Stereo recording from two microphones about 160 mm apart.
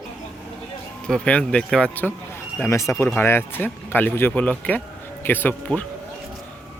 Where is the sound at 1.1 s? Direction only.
5° left (ahead or behind).